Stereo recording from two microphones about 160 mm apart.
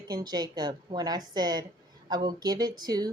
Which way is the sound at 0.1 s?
25° right (ahead or behind).